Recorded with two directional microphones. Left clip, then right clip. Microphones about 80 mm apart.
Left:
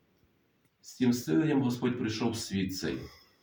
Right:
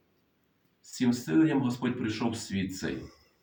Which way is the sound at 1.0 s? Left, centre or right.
Centre.